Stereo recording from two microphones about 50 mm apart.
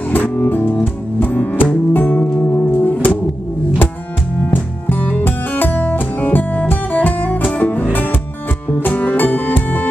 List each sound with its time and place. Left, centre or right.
0.1 s music: left
2.0 s music: left
4.5 s music: left